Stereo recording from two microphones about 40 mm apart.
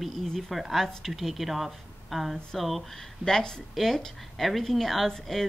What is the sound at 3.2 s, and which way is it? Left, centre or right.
Speech, centre.